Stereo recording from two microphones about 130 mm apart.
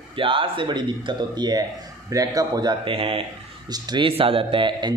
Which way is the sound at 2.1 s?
30° right (ahead or behind).